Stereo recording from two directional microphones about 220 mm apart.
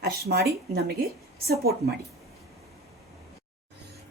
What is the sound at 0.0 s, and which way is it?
Speech, 45° right (ahead or behind).